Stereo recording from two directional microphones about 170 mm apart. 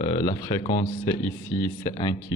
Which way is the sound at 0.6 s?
50° left (ahead or behind).